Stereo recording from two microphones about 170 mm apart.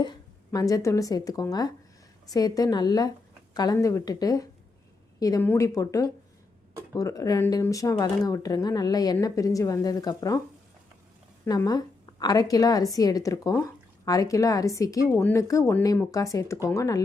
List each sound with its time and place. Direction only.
0.0 s a woman's voice: 25° left (ahead or behind)
11.4 s a woman's voice: 20° left (ahead or behind)